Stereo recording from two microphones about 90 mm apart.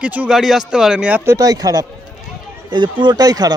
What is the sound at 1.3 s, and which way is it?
Speech, 45° right (ahead or behind).